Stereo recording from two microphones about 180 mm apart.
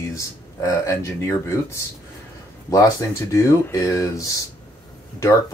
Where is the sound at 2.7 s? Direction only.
15° left (ahead or behind).